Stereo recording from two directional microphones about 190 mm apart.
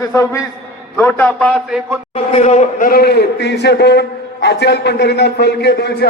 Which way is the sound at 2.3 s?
35° left (ahead or behind).